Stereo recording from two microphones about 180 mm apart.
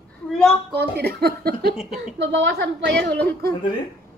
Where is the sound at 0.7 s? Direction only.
60° right (ahead or behind); by 2.9 s 80° right.